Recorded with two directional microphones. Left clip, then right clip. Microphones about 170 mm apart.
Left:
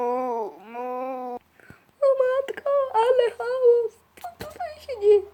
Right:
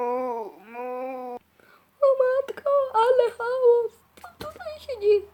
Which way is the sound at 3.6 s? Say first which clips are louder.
Left 1 dB; centre (ahead or behind).